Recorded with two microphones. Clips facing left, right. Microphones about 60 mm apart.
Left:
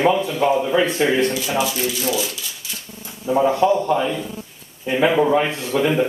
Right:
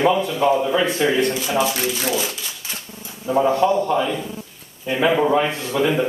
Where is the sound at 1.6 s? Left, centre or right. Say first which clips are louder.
Right 1 dB; right.